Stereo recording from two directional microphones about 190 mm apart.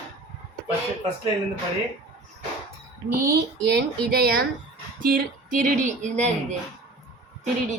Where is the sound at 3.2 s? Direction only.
55° right (ahead or behind).